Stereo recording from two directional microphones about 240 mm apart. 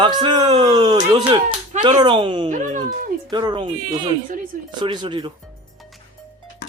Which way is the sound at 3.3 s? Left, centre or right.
Centre.